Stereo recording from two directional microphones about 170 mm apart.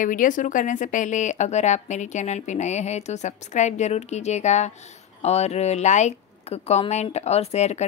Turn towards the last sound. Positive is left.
turn(degrees=40)  # may be behind; listen again after turning